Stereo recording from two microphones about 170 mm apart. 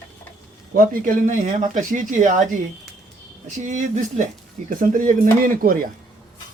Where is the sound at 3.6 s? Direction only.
50° right (ahead or behind).